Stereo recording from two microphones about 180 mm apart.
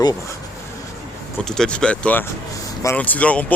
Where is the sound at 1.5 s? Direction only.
5° left (ahead or behind).